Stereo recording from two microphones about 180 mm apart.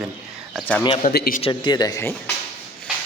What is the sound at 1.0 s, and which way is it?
Speech, 55° left (ahead or behind).